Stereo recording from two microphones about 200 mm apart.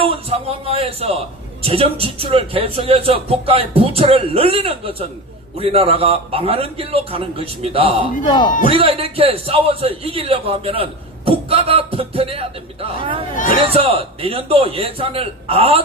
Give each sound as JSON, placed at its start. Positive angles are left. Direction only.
{"t": 0.0, "sound": "a man's voice", "side_deg": -30}
{"t": 8.3, "sound": "a man's voice", "side_deg": 20}
{"t": 8.7, "sound": "a man's voice", "side_deg": -30}
{"t": 13.3, "sound": "speech", "side_deg": 40}
{"t": 13.7, "sound": "a man's voice", "side_deg": -30}